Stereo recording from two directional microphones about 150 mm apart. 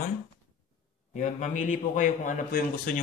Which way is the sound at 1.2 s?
55° left (ahead or behind).